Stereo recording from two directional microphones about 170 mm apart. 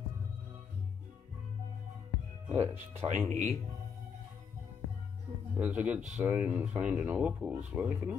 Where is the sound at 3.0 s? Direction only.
40° right (ahead or behind).